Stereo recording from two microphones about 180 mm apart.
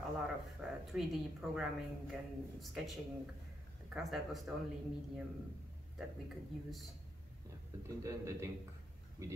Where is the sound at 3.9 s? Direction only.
Centre (ahead or behind).